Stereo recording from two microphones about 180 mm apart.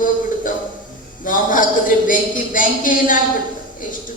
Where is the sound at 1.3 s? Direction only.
50° left (ahead or behind).